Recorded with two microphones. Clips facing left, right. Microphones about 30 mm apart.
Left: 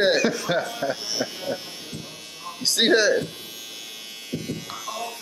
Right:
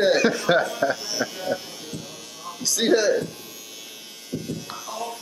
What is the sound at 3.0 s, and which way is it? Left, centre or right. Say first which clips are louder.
Speech: even; left.